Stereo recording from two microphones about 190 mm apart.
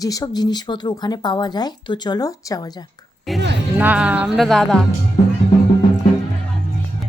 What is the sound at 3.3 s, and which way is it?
Music, centre (ahead or behind).